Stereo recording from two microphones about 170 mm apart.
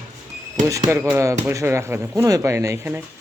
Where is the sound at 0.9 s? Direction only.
10° right (ahead or behind).